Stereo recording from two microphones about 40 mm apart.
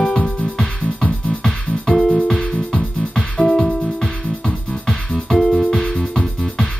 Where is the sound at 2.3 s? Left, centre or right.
Centre.